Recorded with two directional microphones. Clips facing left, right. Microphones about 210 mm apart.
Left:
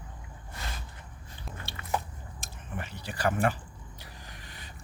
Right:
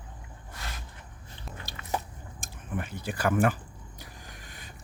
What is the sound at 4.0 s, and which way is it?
Vehicle, 50° right (ahead or behind).